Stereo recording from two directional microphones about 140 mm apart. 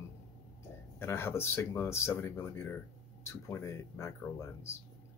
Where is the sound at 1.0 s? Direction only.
15° left (ahead or behind).